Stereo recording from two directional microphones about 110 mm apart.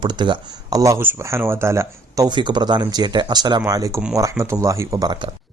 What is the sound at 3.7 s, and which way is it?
Speech, 30° right (ahead or behind).